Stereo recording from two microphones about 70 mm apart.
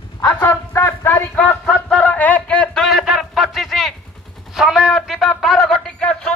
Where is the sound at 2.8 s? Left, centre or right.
Centre.